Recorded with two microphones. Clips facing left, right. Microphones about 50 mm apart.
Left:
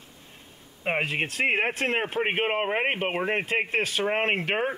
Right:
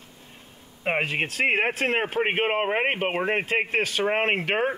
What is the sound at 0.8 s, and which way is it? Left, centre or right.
Speech, centre.